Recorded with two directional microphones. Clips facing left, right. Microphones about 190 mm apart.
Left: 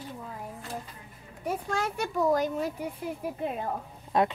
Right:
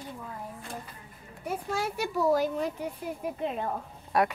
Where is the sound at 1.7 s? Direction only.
10° right (ahead or behind).